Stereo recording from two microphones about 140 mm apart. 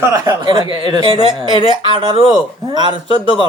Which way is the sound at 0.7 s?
35° right (ahead or behind).